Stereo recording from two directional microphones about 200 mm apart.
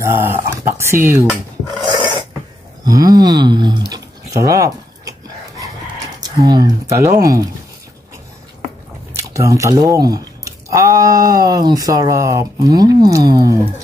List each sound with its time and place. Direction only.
0.0 s speech: 10° right (ahead or behind)
1.3 s filing: centre (ahead or behind)
2.8 s speech: 20° right (ahead or behind)
3.9 s dog: 15° right (ahead or behind)
6.2 s speech: 20° right (ahead or behind)
9.1 s speech: 15° right (ahead or behind)